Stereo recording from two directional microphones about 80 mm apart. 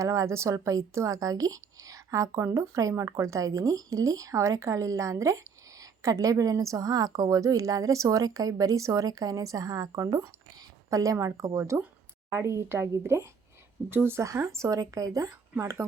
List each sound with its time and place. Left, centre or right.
0.0 s speech: right